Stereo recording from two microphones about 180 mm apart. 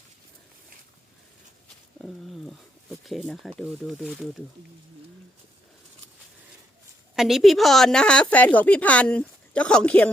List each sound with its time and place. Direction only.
2.5 s speech: centre (ahead or behind)
7.2 s a woman's voice: centre (ahead or behind)